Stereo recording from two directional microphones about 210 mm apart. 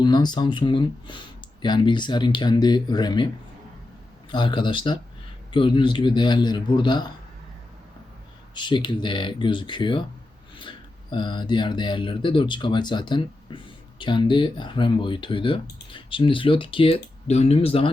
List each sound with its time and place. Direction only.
0.0 s speech: 20° left (ahead or behind)
4.3 s speech: 20° left (ahead or behind)
8.5 s speech: 20° left (ahead or behind)